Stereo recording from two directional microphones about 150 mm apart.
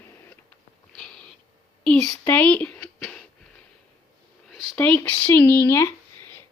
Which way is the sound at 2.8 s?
20° left (ahead or behind).